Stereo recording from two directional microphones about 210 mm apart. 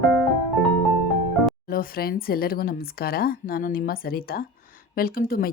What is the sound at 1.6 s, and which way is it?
Speech, 45° left (ahead or behind).